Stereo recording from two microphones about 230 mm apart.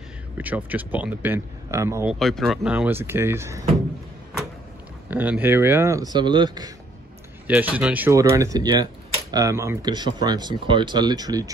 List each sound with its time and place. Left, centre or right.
0.4 s speech: centre
2.1 s speech: centre
5.1 s speech: centre
7.4 s speech: centre